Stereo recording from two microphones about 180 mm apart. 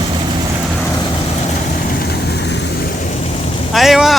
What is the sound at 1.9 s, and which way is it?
Vehicle, 65° left (ahead or behind).